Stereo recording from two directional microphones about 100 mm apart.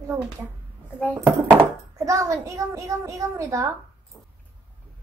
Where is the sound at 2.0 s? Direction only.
30° right (ahead or behind).